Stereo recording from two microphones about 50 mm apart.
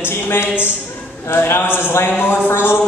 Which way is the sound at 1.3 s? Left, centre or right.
Left.